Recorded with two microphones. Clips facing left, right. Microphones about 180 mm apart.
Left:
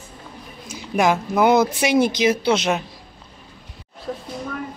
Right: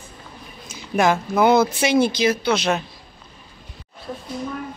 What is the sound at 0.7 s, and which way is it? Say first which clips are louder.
A woman's voice: even; 15° left (ahead or behind).